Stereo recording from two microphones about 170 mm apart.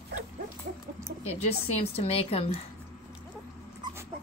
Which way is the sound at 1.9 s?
35° left (ahead or behind).